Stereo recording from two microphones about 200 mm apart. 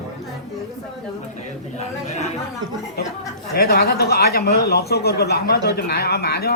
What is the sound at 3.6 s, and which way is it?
Speech, 50° left (ahead or behind).